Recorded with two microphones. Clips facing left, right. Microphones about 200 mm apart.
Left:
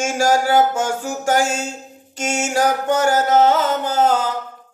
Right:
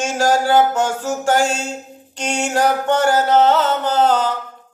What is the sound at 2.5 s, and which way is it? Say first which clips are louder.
Mantra: right 1 dB; 10° left (ahead or behind).